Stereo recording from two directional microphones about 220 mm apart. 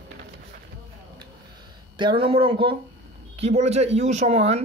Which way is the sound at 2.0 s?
20° right (ahead or behind).